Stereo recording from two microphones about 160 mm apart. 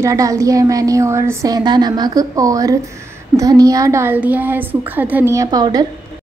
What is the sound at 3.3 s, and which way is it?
A woman's voice, 20° right (ahead or behind).